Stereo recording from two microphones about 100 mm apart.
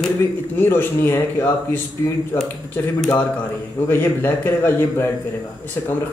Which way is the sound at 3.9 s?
20° left (ahead or behind).